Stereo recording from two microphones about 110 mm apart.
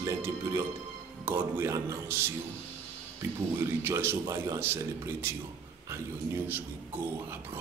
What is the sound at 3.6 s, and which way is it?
Speech, 20° right (ahead or behind).